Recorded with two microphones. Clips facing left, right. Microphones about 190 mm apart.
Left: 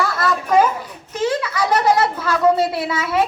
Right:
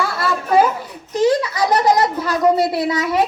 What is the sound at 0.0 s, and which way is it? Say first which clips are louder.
Children playing: left 1 dB; 25° right (ahead or behind).